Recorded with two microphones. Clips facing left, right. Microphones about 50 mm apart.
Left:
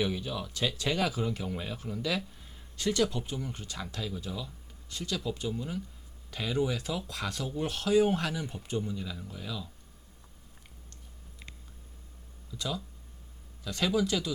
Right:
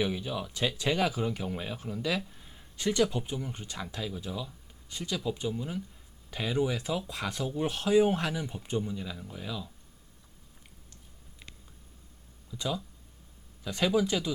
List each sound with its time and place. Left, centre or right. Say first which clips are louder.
0.0 s speech: right 1 dB; centre
12.5 s speech: right 2 dB; centre